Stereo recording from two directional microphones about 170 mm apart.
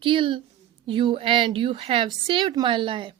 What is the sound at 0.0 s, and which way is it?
A woman's voice, 30° right (ahead or behind).